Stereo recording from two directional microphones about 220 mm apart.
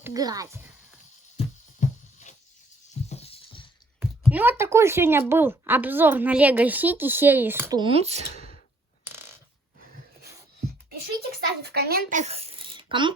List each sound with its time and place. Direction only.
0.0 s a child's voice: 15° right (ahead or behind)
2.9 s music: 30° left (ahead or behind)
4.3 s a woman's voice: 10° right (ahead or behind)
7.8 s speech: 25° right (ahead or behind)
9.0 s mechanisms: 10° right (ahead or behind)
11.3 s speech: 45° right (ahead or behind); by 13.1 s 20° right (ahead or behind)